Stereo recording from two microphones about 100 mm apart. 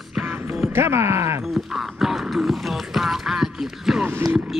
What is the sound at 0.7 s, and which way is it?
Music, 25° right (ahead or behind).